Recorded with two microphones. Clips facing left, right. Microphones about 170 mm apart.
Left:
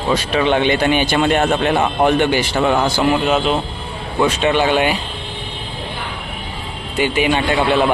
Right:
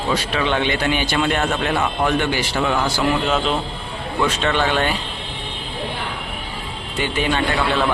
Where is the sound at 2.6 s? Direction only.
35° left (ahead or behind).